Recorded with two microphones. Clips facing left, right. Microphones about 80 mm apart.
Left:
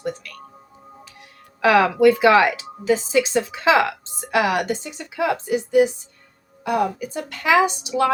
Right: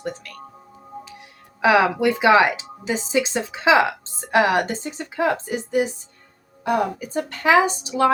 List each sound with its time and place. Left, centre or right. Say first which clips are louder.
1.6 s speech: left 2 dB; centre
4.3 s speech: right 2 dB; right